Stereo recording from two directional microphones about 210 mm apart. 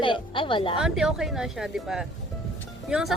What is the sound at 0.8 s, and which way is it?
Speech, centre (ahead or behind).